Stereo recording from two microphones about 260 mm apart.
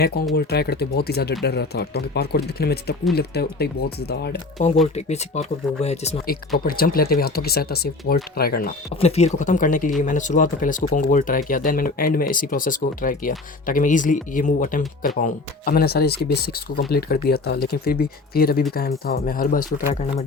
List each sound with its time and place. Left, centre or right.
0.3 s speech: left
4.6 s speech: left
6.7 s speech: left
9.0 s speech: left